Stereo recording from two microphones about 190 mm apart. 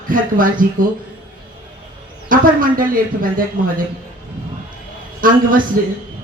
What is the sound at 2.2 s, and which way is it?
Speech, 45° right (ahead or behind).